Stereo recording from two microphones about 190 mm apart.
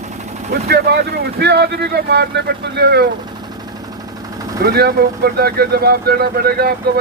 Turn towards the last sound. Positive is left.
turn(degrees=-55)  # may be behind; listen again after turning